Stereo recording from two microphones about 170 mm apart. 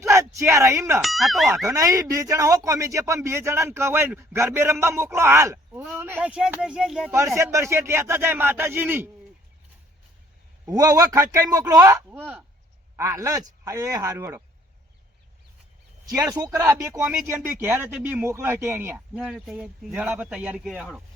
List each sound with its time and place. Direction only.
0.0 s speech: 15° right (ahead or behind)
1.0 s speech: centre (ahead or behind)
1.6 s speech: 20° right (ahead or behind); by 7.1 s centre (ahead or behind)
7.3 s speech: 15° right (ahead or behind)
10.7 s speech: 20° right (ahead or behind)
16.3 s speech: 20° right (ahead or behind)